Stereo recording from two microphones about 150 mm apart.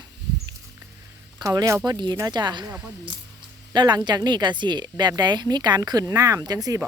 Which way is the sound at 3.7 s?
30° right (ahead or behind).